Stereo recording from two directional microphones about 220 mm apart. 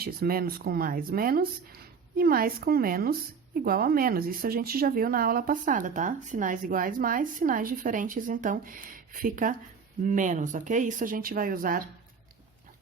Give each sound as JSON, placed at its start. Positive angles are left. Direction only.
{"t": 0.0, "sound": "speech", "side_deg": -45}